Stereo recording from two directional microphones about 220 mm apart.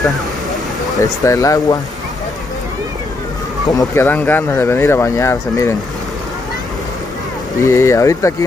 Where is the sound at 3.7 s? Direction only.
15° left (ahead or behind).